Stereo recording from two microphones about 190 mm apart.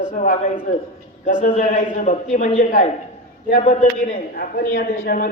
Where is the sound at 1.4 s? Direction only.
50° left (ahead or behind).